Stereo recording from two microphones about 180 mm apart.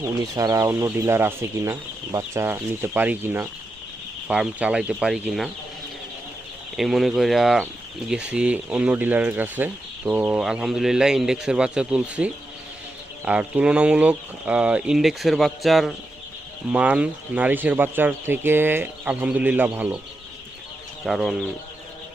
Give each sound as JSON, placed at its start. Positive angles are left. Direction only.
{"t": 0.0, "sound": "speech", "side_deg": -20}
{"t": 6.7, "sound": "speech", "side_deg": 0}
{"t": 21.0, "sound": "speech", "side_deg": 0}